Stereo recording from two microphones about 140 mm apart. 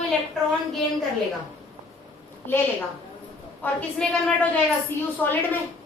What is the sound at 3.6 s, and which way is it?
A woman's voice, 10° left (ahead or behind).